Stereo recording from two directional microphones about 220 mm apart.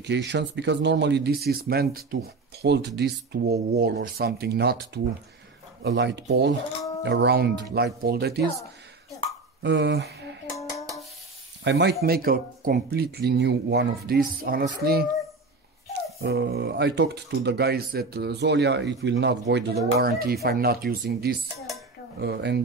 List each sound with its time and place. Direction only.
0.0 s speech: 50° right (ahead or behind)
9.6 s speech: 55° right (ahead or behind)
10.5 s music: 15° left (ahead or behind)
11.6 s speech: 50° right (ahead or behind)